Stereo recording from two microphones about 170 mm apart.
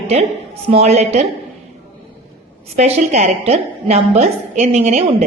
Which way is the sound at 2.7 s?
40° right (ahead or behind).